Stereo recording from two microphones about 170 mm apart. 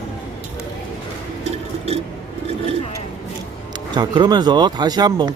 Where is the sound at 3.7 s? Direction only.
25° right (ahead or behind).